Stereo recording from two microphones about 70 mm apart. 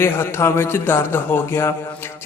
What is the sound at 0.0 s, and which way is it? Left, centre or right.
A man's voice, left.